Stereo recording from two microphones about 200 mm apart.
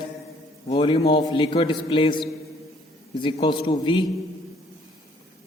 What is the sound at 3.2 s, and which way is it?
Speech, 25° left (ahead or behind).